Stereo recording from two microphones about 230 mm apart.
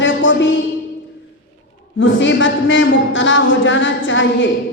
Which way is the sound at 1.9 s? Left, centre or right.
Left.